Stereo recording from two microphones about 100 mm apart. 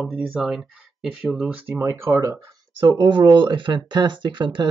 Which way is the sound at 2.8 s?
50° right (ahead or behind).